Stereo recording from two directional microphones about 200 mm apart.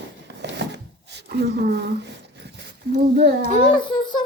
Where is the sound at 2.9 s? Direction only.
45° right (ahead or behind).